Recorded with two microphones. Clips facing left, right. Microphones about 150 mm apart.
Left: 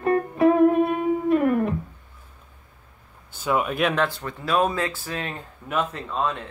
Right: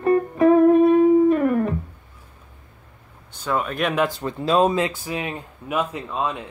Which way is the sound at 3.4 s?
10° left (ahead or behind).